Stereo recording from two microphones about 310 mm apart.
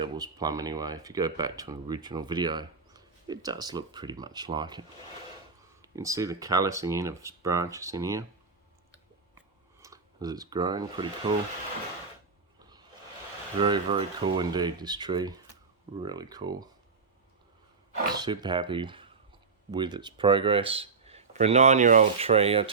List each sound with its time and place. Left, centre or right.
0.0 s speech: centre
9.8 s speech: centre
12.5 s a sound: centre
13.6 s speech: centre
18.1 s speech: centre